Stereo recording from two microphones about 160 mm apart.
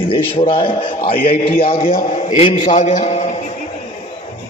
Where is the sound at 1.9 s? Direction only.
50° left (ahead or behind).